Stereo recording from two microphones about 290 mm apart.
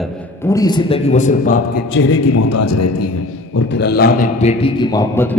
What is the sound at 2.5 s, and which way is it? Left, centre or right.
Speech, left.